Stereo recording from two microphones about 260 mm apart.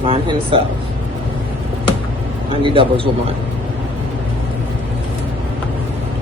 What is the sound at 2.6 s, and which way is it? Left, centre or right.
Speech, centre.